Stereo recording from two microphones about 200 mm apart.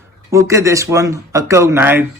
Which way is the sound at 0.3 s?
15° right (ahead or behind).